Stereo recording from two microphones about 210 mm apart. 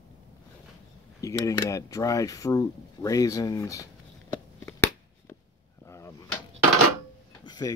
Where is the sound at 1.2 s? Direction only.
15° left (ahead or behind).